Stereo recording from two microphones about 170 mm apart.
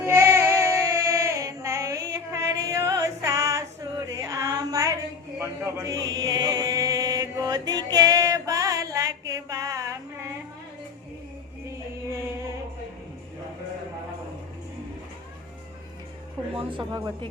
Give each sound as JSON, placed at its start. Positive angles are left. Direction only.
{"t": 0.0, "sound": "female singing", "side_deg": -15}
{"t": 4.1, "sound": "a sound", "side_deg": -20}
{"t": 5.4, "sound": "chant", "side_deg": -20}
{"t": 16.6, "sound": "a woman's voice", "side_deg": -30}